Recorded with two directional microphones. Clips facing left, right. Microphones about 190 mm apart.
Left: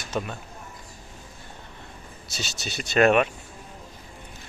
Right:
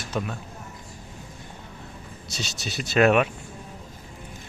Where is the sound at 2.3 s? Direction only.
Centre (ahead or behind).